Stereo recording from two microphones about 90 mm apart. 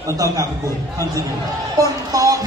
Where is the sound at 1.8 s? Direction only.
40° right (ahead or behind).